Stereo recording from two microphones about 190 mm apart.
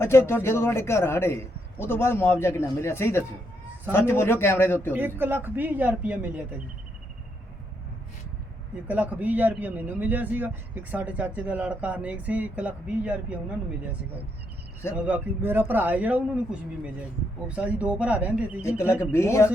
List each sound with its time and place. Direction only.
0.0 s a man's voice: 15° left (ahead or behind)
4.9 s speech: 10° right (ahead or behind)
8.9 s speech: 10° right (ahead or behind)
15.0 s speech: 10° right (ahead or behind)
19.1 s a man's voice: 15° left (ahead or behind)